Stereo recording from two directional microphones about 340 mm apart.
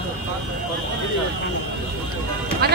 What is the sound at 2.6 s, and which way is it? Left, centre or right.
Speech, right.